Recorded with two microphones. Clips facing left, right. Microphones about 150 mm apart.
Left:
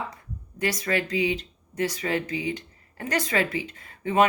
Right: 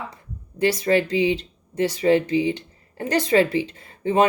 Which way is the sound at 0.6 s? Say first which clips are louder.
Right 7 dB; 30° right (ahead or behind).